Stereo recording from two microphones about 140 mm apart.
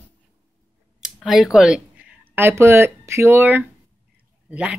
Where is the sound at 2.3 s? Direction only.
20° right (ahead or behind).